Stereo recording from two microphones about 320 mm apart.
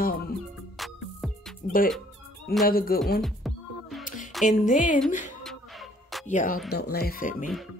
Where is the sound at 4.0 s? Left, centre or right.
Left.